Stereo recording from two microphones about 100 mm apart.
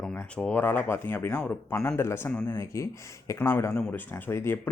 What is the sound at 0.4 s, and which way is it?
Speech, 15° left (ahead or behind).